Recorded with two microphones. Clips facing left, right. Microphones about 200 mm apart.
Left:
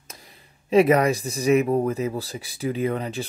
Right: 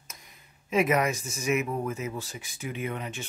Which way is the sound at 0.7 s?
35° left (ahead or behind).